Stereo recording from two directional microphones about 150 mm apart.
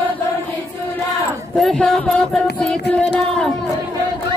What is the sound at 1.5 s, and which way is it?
Speech, 5° left (ahead or behind).